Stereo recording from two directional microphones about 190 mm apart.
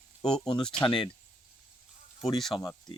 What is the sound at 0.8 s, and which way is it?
Speech, 25° left (ahead or behind).